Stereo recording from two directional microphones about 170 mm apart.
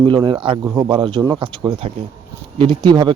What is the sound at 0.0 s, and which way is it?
Speech, 30° right (ahead or behind).